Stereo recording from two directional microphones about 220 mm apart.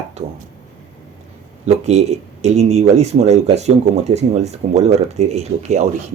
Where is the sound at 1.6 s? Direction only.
30° right (ahead or behind).